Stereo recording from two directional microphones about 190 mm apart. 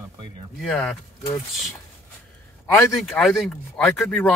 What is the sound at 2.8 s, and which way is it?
Speech, 5° left (ahead or behind).